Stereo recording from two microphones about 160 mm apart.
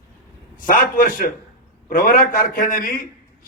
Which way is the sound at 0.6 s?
60° left (ahead or behind).